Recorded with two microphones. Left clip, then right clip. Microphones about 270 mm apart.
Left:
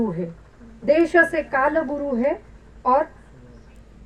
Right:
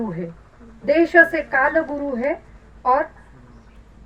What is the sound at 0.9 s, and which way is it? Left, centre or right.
A woman's voice, right.